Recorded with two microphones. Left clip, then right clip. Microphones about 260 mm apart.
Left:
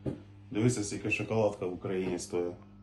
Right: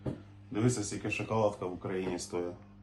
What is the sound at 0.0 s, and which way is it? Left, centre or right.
Speech, centre.